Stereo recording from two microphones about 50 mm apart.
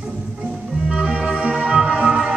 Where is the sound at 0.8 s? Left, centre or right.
Centre.